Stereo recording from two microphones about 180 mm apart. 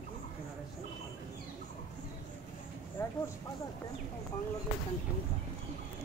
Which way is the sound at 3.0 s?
15° left (ahead or behind).